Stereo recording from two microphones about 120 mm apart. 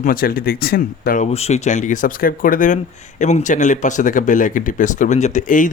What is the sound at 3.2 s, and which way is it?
Speech, 80° left.